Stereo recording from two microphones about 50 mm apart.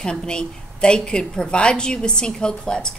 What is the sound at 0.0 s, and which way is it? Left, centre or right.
A woman's voice, centre.